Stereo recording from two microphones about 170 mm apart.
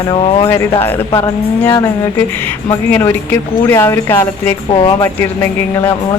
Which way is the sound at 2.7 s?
15° left (ahead or behind).